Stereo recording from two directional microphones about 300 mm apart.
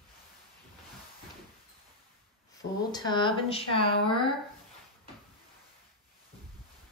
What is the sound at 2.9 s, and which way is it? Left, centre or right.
Speech, centre.